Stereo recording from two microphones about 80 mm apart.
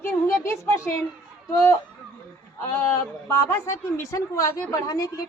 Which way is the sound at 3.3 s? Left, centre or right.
Left.